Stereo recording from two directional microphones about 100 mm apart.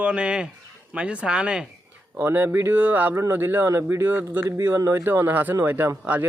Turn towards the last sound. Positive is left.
turn(degrees=-15)  # may be behind; listen again after turning